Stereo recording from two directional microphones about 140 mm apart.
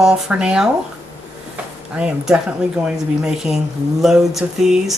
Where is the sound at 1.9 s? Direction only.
5° right (ahead or behind).